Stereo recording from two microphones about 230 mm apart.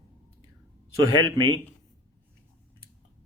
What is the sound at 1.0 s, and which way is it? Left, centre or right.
Speech, right.